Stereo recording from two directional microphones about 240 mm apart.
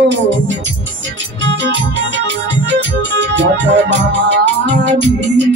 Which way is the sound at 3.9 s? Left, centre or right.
Right.